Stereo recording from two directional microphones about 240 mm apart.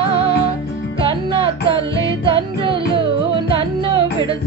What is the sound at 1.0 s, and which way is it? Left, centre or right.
Music, right.